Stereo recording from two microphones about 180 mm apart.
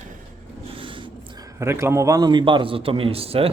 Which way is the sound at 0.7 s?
30° right (ahead or behind).